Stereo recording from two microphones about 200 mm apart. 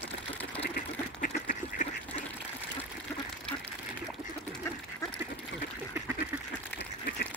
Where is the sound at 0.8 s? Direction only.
45° left (ahead or behind).